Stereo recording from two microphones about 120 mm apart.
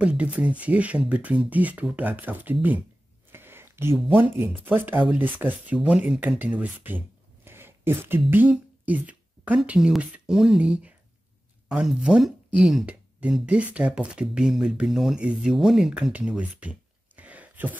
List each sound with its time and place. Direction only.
0.0 s speech: 10° right (ahead or behind)
3.3 s a sound: 20° right (ahead or behind)
4.1 s speech: 20° right (ahead or behind)